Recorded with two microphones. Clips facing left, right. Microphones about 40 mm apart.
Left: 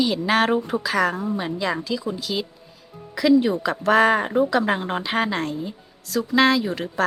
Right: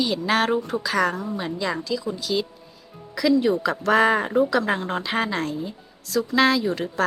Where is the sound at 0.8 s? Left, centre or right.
Centre.